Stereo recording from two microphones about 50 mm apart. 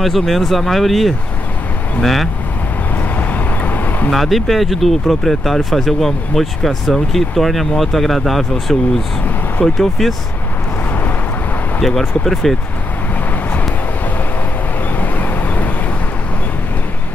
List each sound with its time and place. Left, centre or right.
0.0 s speech: centre
3.2 s vehicle: left
4.1 s speech: centre
9.8 s speech: centre
11.8 s speech: centre
15.0 s vehicle: left